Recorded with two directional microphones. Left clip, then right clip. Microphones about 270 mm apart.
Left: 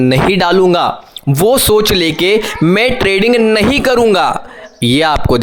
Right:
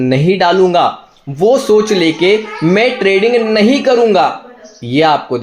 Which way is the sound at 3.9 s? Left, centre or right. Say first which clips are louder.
Even; left.